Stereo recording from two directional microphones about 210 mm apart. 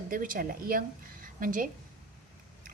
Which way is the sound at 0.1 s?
40° right (ahead or behind).